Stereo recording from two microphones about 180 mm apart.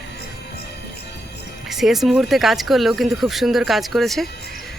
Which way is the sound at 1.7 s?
Centre (ahead or behind).